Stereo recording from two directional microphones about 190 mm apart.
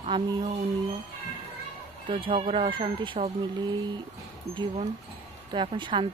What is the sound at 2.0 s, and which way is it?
Speech, 25° right (ahead or behind).